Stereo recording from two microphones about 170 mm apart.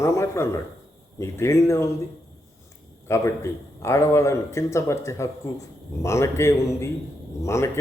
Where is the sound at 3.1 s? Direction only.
15° left (ahead or behind).